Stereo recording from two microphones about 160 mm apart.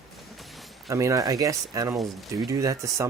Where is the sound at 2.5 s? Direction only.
20° right (ahead or behind).